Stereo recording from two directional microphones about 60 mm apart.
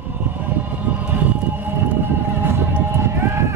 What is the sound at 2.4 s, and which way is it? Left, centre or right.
Music, right.